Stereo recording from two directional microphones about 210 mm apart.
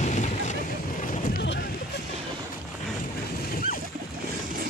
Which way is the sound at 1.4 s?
55° left (ahead or behind).